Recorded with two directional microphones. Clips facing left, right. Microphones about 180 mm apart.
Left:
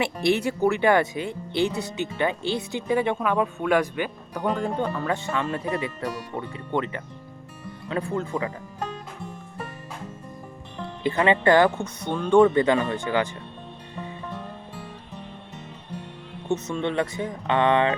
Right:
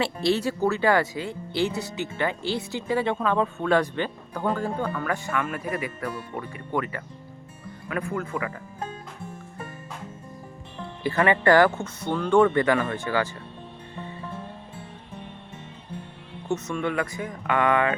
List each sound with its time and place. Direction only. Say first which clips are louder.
0.0 s speech: left 1 dB; 20° left (ahead or behind)
11.0 s speech: left 1 dB; 20° left (ahead or behind)
16.6 s speech: left 2 dB; 25° left (ahead or behind)